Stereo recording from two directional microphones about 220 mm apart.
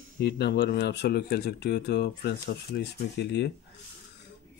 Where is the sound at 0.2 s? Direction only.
50° left (ahead or behind).